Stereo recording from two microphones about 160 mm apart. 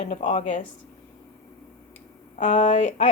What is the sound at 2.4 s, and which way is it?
Speech, 50° left (ahead or behind).